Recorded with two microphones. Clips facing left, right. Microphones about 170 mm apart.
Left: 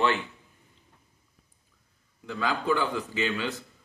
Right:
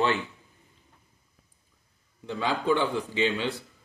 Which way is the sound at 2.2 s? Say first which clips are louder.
Right 2 dB; 25° right (ahead or behind).